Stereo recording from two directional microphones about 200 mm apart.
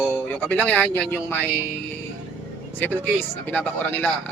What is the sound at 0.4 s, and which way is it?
Speech, 10° left (ahead or behind).